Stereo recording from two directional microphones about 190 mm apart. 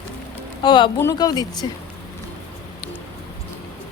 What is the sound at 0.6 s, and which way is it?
Speech, 25° left (ahead or behind).